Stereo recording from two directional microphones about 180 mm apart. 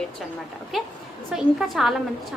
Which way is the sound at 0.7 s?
Centre (ahead or behind).